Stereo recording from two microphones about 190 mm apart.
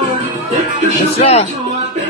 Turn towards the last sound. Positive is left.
turn(degrees=35)  # may be behind; listen again after turning